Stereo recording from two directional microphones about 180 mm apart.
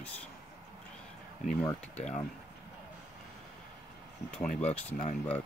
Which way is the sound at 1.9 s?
40° left (ahead or behind).